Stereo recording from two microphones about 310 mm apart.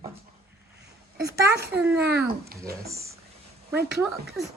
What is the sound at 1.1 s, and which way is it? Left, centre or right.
Speech, right.